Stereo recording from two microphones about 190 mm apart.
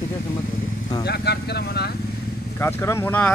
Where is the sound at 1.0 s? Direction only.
60° left (ahead or behind).